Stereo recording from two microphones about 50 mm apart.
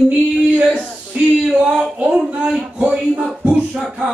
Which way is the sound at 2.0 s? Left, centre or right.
Right.